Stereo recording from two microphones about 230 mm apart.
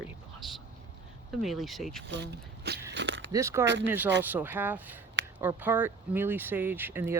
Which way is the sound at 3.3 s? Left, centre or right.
Centre.